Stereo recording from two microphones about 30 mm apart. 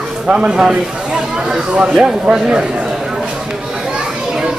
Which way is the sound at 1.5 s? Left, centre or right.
Right.